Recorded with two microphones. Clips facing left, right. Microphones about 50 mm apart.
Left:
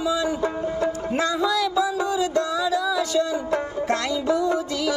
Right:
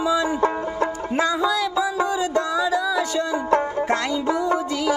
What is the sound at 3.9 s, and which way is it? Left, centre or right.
Music, right.